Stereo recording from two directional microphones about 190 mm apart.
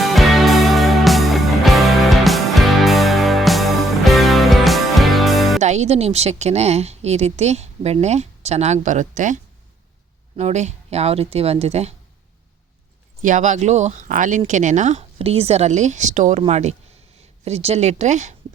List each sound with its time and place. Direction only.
0.0 s music: centre (ahead or behind)
5.5 s a woman's voice: 35° right (ahead or behind)
13.2 s a woman's voice: 40° right (ahead or behind)